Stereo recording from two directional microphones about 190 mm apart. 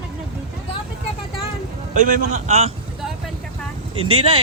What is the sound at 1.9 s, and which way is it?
Speech, 45° right (ahead or behind).